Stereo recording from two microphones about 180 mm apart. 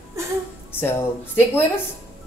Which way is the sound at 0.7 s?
10° left (ahead or behind).